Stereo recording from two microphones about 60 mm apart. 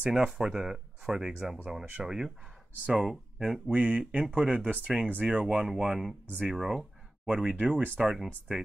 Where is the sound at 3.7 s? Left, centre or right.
Right.